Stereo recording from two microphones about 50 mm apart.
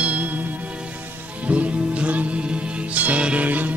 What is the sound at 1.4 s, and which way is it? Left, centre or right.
Music, right.